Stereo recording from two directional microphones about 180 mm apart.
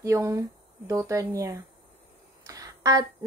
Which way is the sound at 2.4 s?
20° right (ahead or behind).